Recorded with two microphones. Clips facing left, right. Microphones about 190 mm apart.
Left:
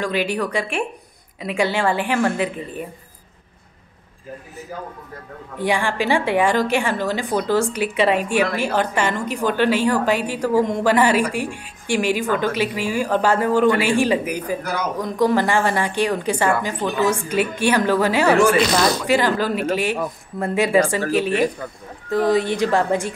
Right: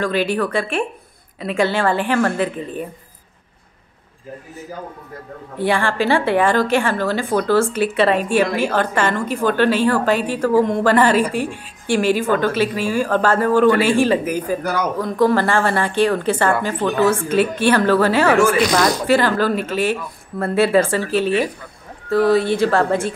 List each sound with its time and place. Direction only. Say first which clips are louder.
0.0 s a woman's voice: right 3 dB; 15° left (ahead or behind)
5.6 s a woman's voice: right 2 dB; 15° left (ahead or behind)
22.1 s a woman's voice: right 3 dB; 15° left (ahead or behind)